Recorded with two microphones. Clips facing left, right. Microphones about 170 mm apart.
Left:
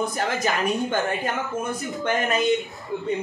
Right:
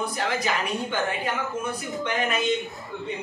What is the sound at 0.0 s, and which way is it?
Speech, 45° left (ahead or behind).